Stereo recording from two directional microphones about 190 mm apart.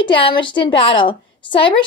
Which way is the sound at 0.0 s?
25° left (ahead or behind).